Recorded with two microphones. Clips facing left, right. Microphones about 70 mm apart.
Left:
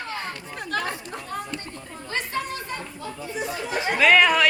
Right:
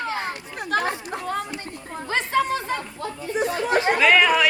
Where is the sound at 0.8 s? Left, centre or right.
Right.